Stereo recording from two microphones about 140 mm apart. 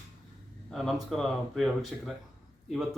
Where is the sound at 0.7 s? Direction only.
Centre (ahead or behind).